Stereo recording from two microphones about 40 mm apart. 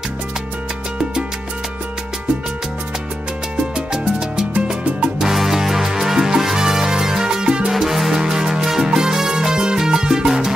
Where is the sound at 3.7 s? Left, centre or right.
Centre.